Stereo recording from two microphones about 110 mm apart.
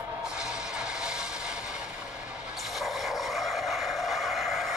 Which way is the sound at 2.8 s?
Centre (ahead or behind).